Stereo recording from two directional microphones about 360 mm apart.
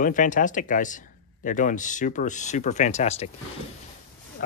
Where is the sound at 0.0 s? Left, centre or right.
Left.